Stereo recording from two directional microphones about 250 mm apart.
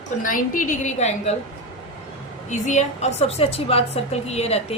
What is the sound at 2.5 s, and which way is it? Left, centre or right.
A woman's voice, left.